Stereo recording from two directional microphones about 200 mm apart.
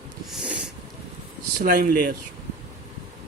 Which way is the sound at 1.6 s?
45° right (ahead or behind).